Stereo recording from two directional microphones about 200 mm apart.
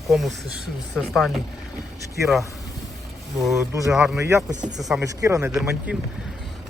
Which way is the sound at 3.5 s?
15° right (ahead or behind).